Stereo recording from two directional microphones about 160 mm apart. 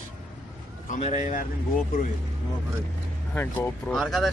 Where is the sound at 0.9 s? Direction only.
50° left (ahead or behind).